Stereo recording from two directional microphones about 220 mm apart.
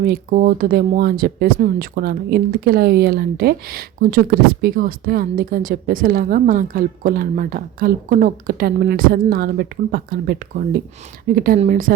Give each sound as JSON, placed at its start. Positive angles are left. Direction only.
{"t": 0.0, "sound": "speech", "side_deg": -40}